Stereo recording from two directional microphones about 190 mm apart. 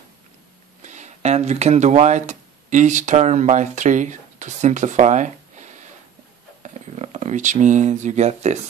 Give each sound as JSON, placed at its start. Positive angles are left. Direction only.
{"t": 0.8, "sound": "speech", "side_deg": -40}